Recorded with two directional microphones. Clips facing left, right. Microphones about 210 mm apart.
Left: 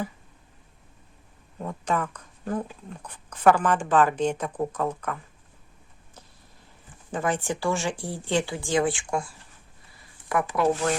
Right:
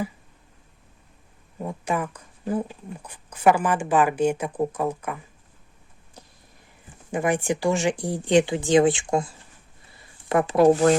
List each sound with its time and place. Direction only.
1.5 s a sound: 10° right (ahead or behind)
2.9 s a woman's voice: 10° right (ahead or behind)
7.1 s a woman's voice: 15° right (ahead or behind)